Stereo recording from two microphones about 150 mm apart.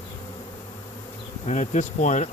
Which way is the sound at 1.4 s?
55° left (ahead or behind).